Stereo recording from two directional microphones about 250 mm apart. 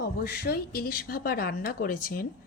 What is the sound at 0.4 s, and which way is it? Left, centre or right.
A woman's voice, left.